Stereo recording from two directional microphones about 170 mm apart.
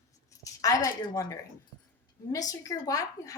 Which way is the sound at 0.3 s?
20° left (ahead or behind).